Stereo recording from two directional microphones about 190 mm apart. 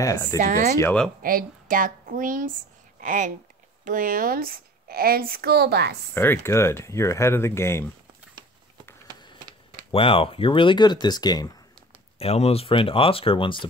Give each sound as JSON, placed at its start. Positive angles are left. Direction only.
{"t": 0.0, "sound": "speech", "side_deg": 15}
{"t": 0.4, "sound": "speech", "side_deg": -40}
{"t": 0.7, "sound": "speech", "side_deg": 5}
{"t": 1.2, "sound": "speech", "side_deg": -45}
{"t": 6.1, "sound": "speech", "side_deg": 10}
{"t": 9.8, "sound": "speech", "side_deg": 30}
{"t": 12.2, "sound": "speech", "side_deg": 35}